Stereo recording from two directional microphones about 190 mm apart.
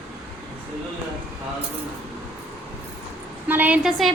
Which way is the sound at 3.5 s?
10° right (ahead or behind).